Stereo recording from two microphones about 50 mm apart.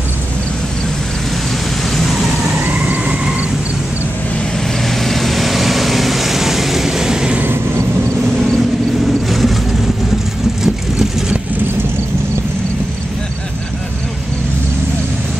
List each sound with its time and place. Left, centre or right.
2.0 s vehicle: centre
2.7 s vehicle: right
4.8 s vehicle: centre
9.0 s vehicle: centre
10.6 s vehicle: centre